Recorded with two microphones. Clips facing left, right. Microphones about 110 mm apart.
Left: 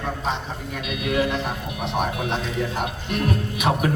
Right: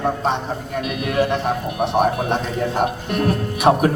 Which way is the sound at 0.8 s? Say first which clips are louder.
Right 3 dB; 40° right (ahead or behind).